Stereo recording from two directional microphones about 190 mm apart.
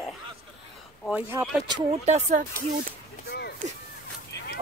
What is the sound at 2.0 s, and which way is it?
Speech, 35° right (ahead or behind).